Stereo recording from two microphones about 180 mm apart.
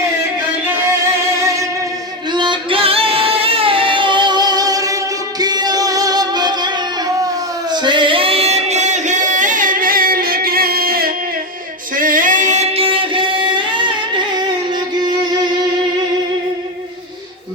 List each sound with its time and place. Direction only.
2.3 s singing: 25° right (ahead or behind)
5.4 s music: 20° right (ahead or behind)
7.7 s singing: 25° right (ahead or behind); by 11.1 s 55° right (ahead or behind)
11.9 s music: 50° right (ahead or behind); by 13.9 s 25° right (ahead or behind)
15.2 s music: 25° right (ahead or behind)